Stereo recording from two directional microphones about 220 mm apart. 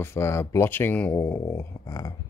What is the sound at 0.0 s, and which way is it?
Speech, 10° left (ahead or behind).